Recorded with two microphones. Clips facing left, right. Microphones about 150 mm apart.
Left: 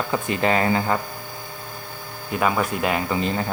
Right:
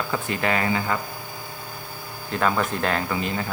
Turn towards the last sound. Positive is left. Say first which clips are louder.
# left 2 dB
turn(degrees=10)  # may be behind; listen again after turning